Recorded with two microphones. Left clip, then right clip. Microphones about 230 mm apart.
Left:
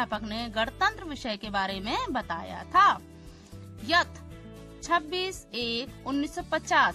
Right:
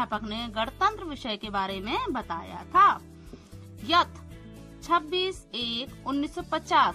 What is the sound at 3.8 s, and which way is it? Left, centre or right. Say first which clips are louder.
Music: right 2 dB; left.